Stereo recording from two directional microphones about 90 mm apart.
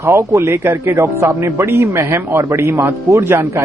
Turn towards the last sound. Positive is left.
turn(degrees=-30)  # may be behind; listen again after turning